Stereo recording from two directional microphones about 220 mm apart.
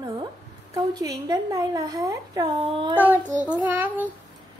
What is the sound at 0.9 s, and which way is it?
A woman's voice, 15° right (ahead or behind).